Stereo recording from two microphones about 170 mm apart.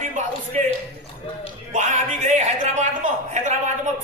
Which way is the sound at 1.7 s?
45° right (ahead or behind).